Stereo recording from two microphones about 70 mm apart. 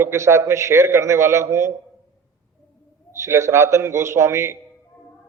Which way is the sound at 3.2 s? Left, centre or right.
Right.